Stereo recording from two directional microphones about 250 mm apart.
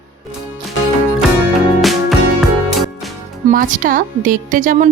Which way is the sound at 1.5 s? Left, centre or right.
Centre.